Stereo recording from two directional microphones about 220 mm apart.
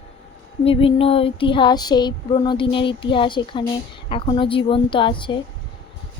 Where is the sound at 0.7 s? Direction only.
25° left (ahead or behind).